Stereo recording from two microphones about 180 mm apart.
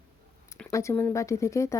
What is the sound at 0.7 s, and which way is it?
Speech, 15° left (ahead or behind).